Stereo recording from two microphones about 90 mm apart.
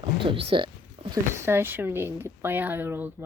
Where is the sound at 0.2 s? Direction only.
80° right.